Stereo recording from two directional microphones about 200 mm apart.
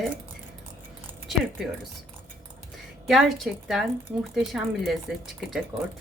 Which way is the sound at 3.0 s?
Centre (ahead or behind).